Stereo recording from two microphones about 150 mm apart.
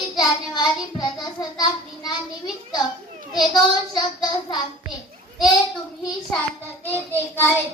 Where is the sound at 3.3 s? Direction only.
30° left (ahead or behind).